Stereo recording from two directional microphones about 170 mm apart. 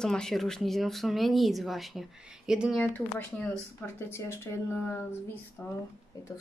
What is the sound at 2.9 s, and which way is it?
Speech, 10° left (ahead or behind).